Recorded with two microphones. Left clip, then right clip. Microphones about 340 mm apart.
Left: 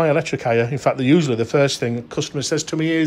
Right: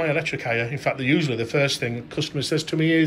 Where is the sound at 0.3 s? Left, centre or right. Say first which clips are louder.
Left 6 dB; left.